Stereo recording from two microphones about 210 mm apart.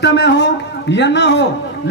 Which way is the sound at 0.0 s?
55° left (ahead or behind).